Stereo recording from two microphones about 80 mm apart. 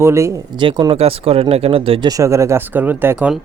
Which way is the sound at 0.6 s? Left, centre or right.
Right.